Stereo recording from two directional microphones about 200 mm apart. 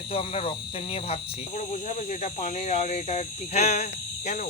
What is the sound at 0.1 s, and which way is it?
Speech, 30° left (ahead or behind).